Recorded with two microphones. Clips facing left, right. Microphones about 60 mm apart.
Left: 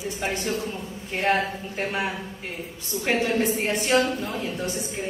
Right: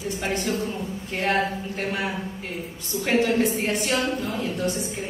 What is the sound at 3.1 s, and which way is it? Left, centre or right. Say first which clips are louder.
A woman's voice: right 2 dB; left.